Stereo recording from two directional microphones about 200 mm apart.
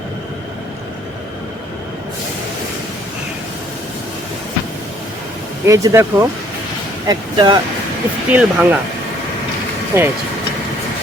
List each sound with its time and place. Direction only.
5.6 s speech: 15° right (ahead or behind)
8.3 s speech: 5° right (ahead or behind)
9.9 s speech: 15° right (ahead or behind)